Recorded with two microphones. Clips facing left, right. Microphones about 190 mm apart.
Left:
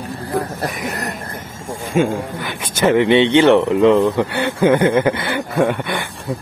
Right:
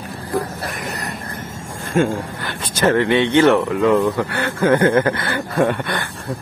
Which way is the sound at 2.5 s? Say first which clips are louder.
Left 2 dB; 15° left (ahead or behind).